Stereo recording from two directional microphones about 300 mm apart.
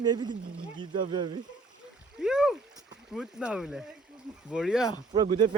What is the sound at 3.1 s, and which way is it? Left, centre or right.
Speech, centre.